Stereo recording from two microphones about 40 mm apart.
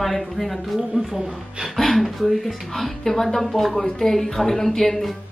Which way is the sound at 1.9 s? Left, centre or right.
Centre.